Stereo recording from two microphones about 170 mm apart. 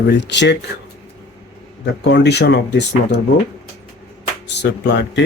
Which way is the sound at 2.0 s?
85° left.